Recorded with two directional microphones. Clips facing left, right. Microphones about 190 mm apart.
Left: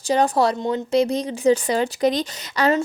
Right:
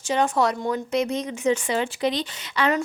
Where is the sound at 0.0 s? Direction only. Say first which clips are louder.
Left 3 dB; 35° left (ahead or behind).